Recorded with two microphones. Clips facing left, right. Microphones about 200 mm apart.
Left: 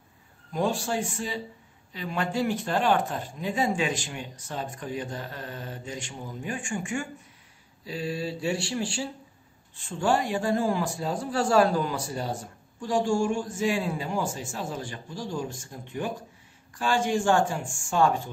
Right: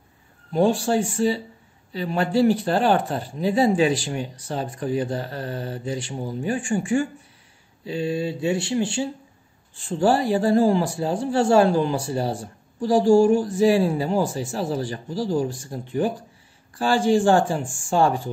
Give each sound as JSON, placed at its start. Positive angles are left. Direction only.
{"t": 0.5, "sound": "a man's voice", "side_deg": -30}
{"t": 9.8, "sound": "a man's voice", "side_deg": -35}